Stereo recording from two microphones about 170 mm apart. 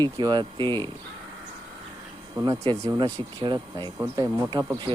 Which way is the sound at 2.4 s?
20° right (ahead or behind).